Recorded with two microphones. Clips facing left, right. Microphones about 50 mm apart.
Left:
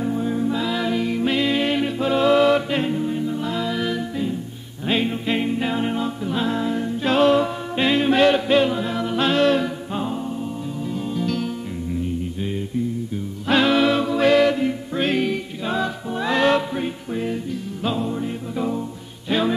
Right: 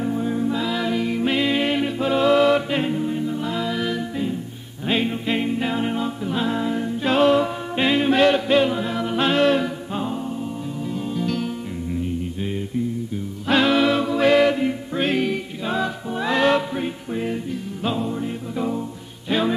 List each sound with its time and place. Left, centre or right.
0.0 s music: centre
10.9 s music: centre
13.5 s music: centre
14.3 s music: centre
15.0 s music: centre